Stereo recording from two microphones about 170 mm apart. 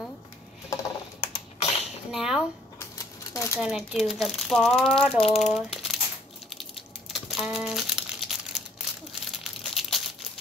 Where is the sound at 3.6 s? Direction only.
Centre (ahead or behind).